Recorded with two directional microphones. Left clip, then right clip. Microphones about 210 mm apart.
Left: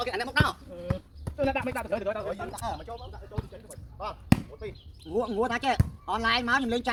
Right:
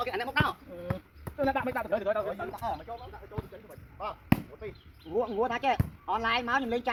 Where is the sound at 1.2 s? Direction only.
10° right (ahead or behind).